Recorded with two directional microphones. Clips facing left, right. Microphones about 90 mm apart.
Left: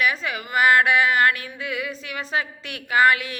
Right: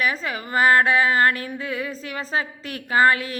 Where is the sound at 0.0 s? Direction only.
35° right (ahead or behind).